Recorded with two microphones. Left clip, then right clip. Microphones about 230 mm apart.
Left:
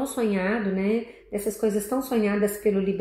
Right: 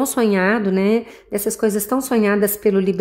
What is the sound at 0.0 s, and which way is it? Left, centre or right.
A woman's voice, right.